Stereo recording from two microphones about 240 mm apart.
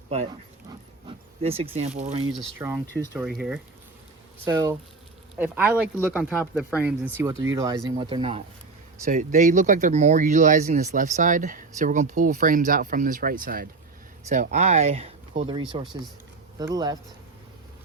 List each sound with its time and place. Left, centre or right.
1.0 s speech: right
2.4 s speech: centre
2.8 s speech: centre
3.1 s speech: centre